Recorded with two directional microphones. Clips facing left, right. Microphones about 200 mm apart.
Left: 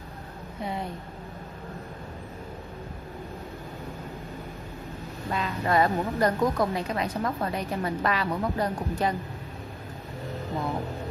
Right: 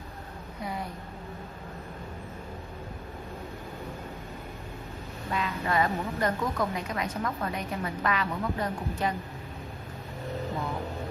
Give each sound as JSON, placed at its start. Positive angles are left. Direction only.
{"t": 5.3, "sound": "speech", "side_deg": 35}